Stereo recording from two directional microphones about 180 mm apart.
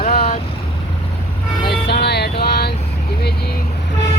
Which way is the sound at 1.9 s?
65° left (ahead or behind).